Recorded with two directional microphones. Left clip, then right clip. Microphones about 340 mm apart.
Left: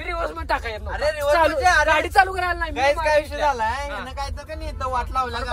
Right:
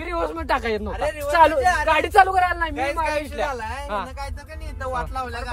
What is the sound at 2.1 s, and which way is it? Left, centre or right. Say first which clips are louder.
Speech: right 3 dB; centre.